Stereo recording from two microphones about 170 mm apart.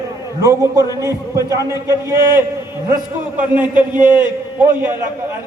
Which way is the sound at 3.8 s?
25° left (ahead or behind).